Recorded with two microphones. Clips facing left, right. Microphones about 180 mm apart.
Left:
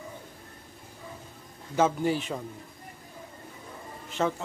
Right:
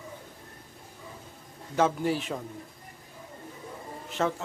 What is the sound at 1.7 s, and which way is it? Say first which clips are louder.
Speech: left 1 dB; centre (ahead or behind).